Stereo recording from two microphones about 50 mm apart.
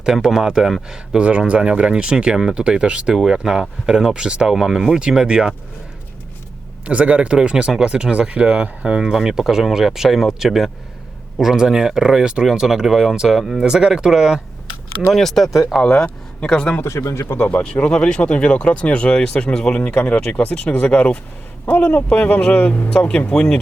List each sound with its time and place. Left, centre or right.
0.0 s speech: centre
6.8 s speech: right
15.1 s speech: centre
15.8 s speech: centre
16.8 s speech: left
17.4 s speech: left
21.7 s a man's voice: left
22.1 s a man's voice: left
22.9 s speech: left